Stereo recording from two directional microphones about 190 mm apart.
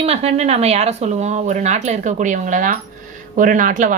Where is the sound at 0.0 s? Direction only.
30° right (ahead or behind).